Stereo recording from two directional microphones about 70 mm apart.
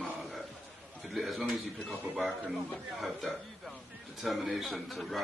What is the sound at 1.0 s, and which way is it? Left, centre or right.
Speech, centre.